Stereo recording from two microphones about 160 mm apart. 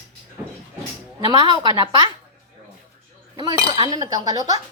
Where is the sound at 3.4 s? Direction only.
25° right (ahead or behind).